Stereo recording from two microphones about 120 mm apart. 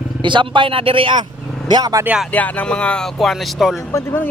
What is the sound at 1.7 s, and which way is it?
Speech, 30° right (ahead or behind).